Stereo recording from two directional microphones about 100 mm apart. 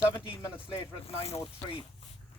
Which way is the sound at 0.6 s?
70° left (ahead or behind).